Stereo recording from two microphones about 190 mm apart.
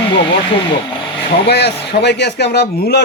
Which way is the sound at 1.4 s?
60° left (ahead or behind).